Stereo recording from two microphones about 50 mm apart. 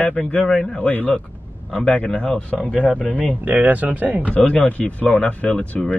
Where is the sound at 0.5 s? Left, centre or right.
Centre.